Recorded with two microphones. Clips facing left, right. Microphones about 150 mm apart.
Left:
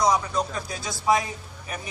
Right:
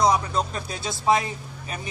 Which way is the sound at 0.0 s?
25° right (ahead or behind).